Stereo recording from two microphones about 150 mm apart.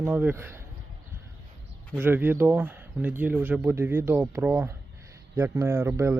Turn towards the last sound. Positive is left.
turn(degrees=-20)  # may be behind; listen again after turning